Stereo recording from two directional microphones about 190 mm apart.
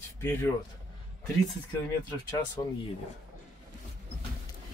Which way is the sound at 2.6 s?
20° left (ahead or behind).